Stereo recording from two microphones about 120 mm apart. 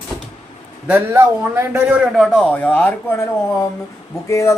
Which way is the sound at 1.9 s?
Centre (ahead or behind).